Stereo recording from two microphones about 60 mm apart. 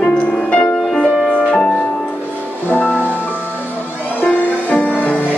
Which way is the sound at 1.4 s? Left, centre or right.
Centre.